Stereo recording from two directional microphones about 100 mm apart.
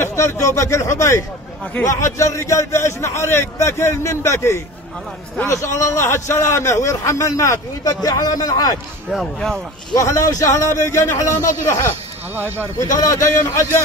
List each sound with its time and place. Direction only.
0.0 s a man's voice: 25° left (ahead or behind)
9.1 s speech: centre (ahead or behind)
10.0 s a man's voice: 30° left (ahead or behind)
12.4 s speech: 20° right (ahead or behind)
12.7 s a man's voice: 30° left (ahead or behind)